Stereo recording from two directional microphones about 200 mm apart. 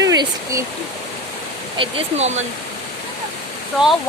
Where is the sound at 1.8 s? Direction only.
30° right (ahead or behind).